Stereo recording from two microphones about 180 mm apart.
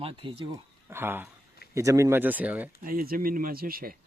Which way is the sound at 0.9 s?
10° right (ahead or behind).